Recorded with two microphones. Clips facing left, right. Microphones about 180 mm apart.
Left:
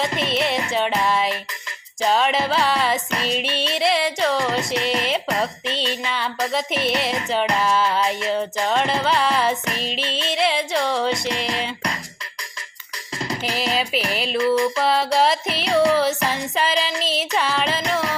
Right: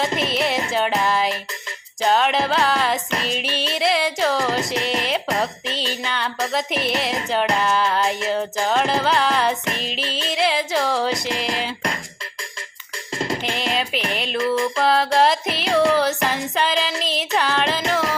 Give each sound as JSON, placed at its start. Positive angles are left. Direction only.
{"t": 0.0, "sound": "music", "side_deg": 0}
{"t": 13.4, "sound": "music", "side_deg": 0}